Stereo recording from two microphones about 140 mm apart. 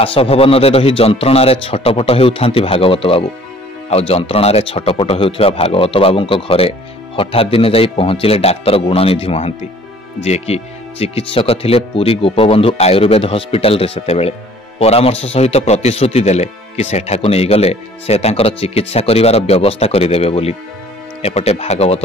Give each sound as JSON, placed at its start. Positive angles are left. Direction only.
{"t": 0.0, "sound": "a man's voice", "side_deg": 45}